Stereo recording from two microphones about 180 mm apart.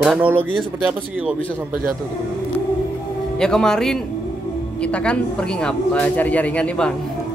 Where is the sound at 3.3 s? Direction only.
5° left (ahead or behind).